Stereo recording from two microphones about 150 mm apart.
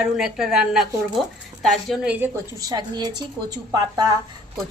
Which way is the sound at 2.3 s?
25° right (ahead or behind).